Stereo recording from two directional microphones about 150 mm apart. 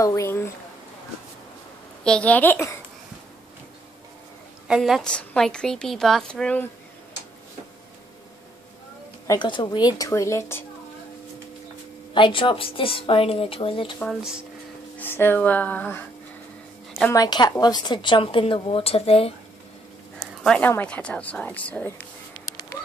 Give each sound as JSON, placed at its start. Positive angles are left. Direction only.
{"t": 0.0, "sound": "a woman's voice", "side_deg": 20}
{"t": 2.0, "sound": "a woman's voice", "side_deg": 10}
{"t": 4.6, "sound": "a woman's voice", "side_deg": 0}
{"t": 9.3, "sound": "a woman's voice", "side_deg": 30}
{"t": 12.1, "sound": "a woman's voice", "side_deg": 35}
{"t": 15.0, "sound": "a woman's voice", "side_deg": 15}
{"t": 17.1, "sound": "a woman's voice", "side_deg": 25}
{"t": 20.4, "sound": "a woman's voice", "side_deg": 10}